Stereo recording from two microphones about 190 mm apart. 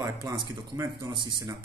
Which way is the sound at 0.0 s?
20° right (ahead or behind).